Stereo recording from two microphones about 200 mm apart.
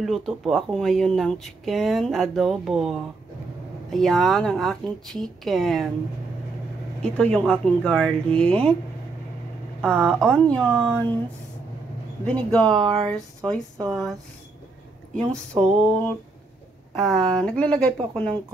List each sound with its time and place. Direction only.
0.0 s speech: centre (ahead or behind)
7.0 s speech: 5° left (ahead or behind)
9.8 s speech: 5° left (ahead or behind)
12.3 s speech: 5° left (ahead or behind)
12.8 s speech: 25° right (ahead or behind)
13.1 s speech: 5° left (ahead or behind)
15.1 s speech: 5° left (ahead or behind)